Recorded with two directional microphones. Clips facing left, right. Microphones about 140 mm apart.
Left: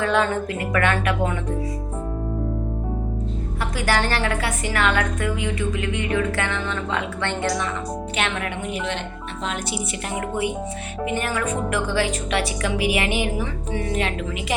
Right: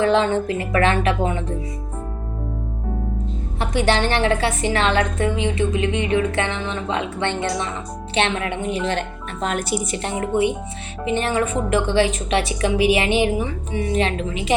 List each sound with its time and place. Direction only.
0.0 s a woman's voice: 25° right (ahead or behind)
3.6 s a woman's voice: 25° right (ahead or behind); by 9.7 s 50° right (ahead or behind)
9.9 s a woman's voice: 30° right (ahead or behind)